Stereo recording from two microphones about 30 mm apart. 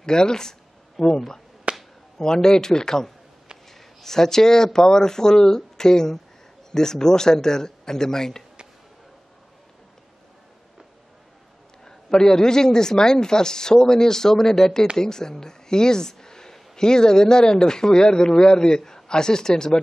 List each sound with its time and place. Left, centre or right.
0.0 s speech: left
1.7 s a sound: right
2.1 s a man's voice: left
11.8 s a man's voice: centre